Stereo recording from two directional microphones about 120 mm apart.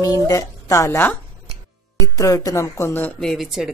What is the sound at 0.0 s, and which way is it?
Speech, 30° left (ahead or behind).